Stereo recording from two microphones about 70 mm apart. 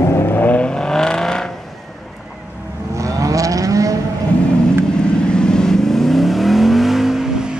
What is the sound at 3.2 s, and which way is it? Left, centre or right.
Vehicle, right.